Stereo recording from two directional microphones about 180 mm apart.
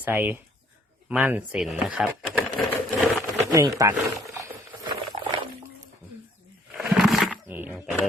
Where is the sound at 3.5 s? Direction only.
20° right (ahead or behind).